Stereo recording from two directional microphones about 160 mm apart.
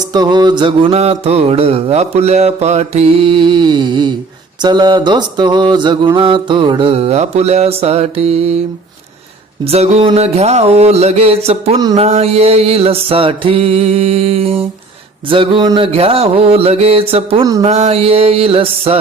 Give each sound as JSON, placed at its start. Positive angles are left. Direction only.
{"t": 0.1, "sound": "mantra", "side_deg": -25}
{"t": 4.6, "sound": "a sound", "side_deg": -25}
{"t": 6.1, "sound": "mantra", "side_deg": -30}
{"t": 9.6, "sound": "mantra", "side_deg": -40}